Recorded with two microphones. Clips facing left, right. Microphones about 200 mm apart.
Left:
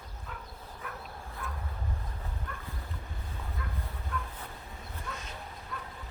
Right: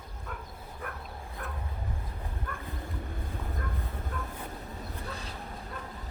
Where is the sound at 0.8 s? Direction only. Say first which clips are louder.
Right 3 dB; 55° right (ahead or behind).